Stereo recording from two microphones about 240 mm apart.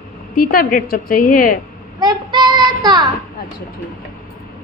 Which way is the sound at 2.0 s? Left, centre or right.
Centre.